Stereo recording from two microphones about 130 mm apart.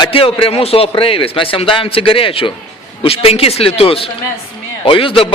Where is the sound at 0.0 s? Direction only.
45° left (ahead or behind).